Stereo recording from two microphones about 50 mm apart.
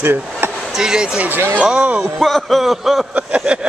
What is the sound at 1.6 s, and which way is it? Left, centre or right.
Speech, right.